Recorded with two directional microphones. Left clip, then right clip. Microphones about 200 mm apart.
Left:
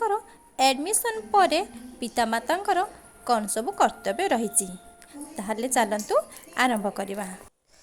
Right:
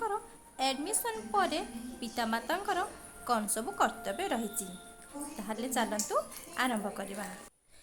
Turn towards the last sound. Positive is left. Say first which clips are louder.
# left 9 dB
turn(degrees=25)  # may be behind; listen again after turning